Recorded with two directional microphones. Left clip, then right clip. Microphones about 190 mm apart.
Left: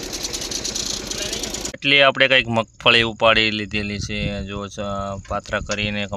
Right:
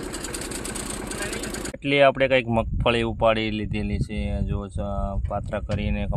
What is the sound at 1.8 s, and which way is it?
Speech, centre (ahead or behind).